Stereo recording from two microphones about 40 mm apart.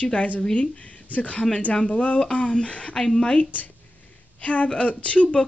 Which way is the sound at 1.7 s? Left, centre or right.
Centre.